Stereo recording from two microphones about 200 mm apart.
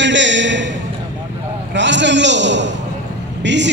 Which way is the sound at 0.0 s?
65° right (ahead or behind).